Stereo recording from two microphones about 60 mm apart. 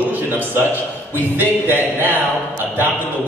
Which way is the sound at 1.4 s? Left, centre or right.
Right.